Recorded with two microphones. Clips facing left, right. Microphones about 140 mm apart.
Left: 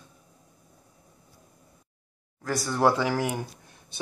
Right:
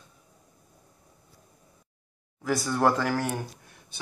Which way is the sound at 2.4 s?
Centre (ahead or behind).